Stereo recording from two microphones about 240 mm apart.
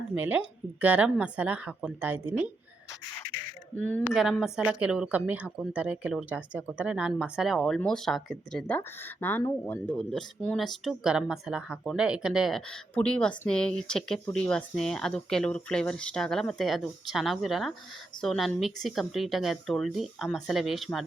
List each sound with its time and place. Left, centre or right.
0.1 s speech: centre
3.8 s speech: centre